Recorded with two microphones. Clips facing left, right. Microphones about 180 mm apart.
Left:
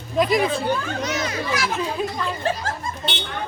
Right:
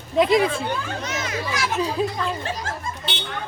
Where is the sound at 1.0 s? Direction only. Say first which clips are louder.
Left 3 dB; 35° left (ahead or behind).